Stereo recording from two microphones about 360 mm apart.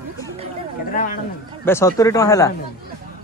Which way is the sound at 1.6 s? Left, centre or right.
Centre.